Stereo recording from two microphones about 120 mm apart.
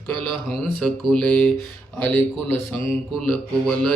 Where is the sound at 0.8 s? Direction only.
5° left (ahead or behind).